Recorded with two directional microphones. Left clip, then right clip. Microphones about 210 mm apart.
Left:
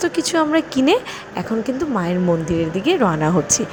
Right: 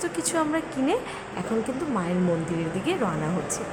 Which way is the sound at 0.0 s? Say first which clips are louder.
Left 8 dB; 25° left (ahead or behind).